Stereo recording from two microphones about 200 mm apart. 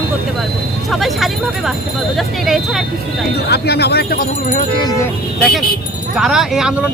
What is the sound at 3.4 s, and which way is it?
Speech, 55° left (ahead or behind).